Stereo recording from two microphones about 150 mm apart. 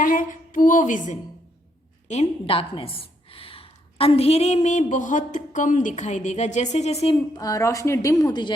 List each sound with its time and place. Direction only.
0.0 s a woman's voice: 65° left (ahead or behind); by 7.2 s 40° left (ahead or behind)
7.3 s a woman's voice: 25° left (ahead or behind)